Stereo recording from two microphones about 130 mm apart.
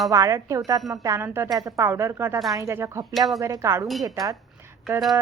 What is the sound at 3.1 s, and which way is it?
Speech, centre (ahead or behind).